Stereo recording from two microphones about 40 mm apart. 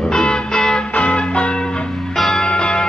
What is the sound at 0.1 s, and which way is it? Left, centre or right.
Music, centre.